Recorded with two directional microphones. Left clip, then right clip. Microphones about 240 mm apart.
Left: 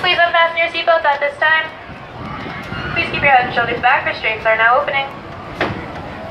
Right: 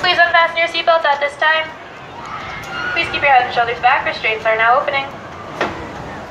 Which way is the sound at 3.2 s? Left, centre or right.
Right.